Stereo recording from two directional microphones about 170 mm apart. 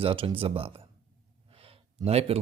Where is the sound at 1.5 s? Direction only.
35° right (ahead or behind).